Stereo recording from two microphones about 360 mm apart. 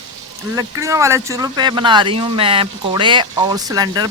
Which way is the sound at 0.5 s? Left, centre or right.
Centre.